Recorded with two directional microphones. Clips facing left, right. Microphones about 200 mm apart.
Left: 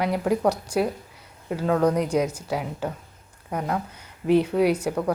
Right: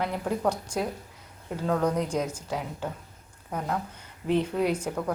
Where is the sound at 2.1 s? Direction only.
70° left (ahead or behind).